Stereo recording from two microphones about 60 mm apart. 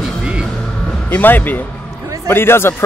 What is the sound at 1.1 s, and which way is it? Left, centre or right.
Speech, left.